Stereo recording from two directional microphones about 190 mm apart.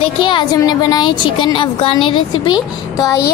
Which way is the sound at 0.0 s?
25° left (ahead or behind).